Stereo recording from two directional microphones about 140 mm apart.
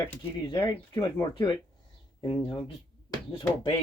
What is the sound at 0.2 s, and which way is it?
Speech, 35° left (ahead or behind).